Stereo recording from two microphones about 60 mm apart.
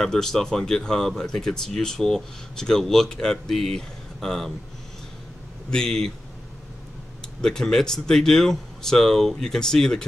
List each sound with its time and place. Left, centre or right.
0.0 s speech: centre
5.7 s speech: centre
7.4 s speech: centre